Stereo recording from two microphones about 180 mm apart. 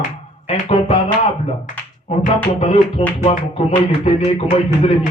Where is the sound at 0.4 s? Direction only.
30° left (ahead or behind).